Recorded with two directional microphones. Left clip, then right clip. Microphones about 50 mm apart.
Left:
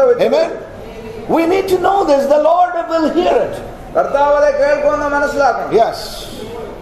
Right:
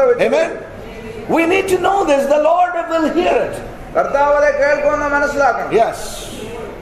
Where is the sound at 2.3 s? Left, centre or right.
Right.